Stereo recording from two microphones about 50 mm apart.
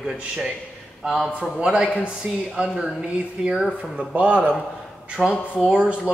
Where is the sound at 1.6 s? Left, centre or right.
Right.